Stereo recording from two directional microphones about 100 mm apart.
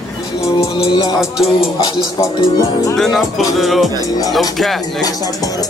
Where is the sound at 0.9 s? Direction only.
50° left (ahead or behind).